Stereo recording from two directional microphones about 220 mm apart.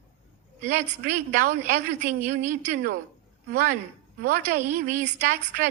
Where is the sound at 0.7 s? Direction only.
40° right (ahead or behind).